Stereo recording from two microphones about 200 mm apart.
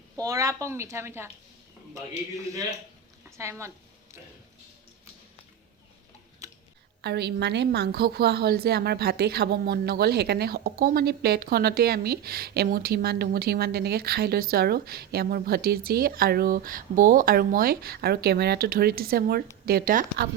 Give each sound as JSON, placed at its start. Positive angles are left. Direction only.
{"t": 0.2, "sound": "a woman's voice", "side_deg": -15}
{"t": 3.2, "sound": "speech", "side_deg": -15}
{"t": 6.4, "sound": "a sound", "side_deg": -15}
{"t": 7.0, "sound": "a woman's voice", "side_deg": -55}